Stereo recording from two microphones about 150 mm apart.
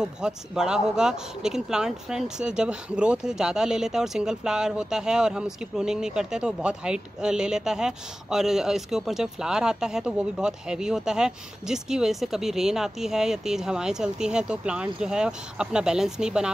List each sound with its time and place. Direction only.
0.0 s speech: 5° right (ahead or behind)